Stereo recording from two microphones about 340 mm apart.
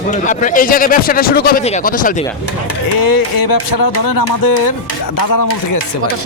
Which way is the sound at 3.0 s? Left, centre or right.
Left.